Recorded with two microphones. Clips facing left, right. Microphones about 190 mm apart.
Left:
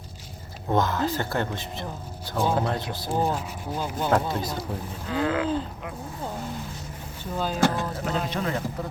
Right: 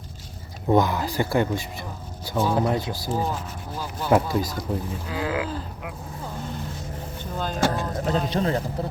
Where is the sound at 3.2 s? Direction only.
10° left (ahead or behind).